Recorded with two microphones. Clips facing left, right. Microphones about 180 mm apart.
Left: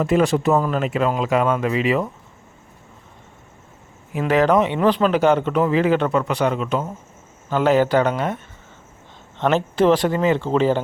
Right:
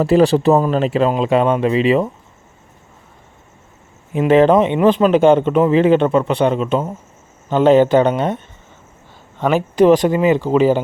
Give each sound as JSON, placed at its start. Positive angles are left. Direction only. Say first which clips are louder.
{"t": 0.0, "sound": "speech", "louder": "right 5 dB", "side_deg": -35}
{"t": 4.1, "sound": "speech", "louder": "right 6 dB", "side_deg": -25}
{"t": 9.4, "sound": "speech", "louder": "right 4 dB", "side_deg": -10}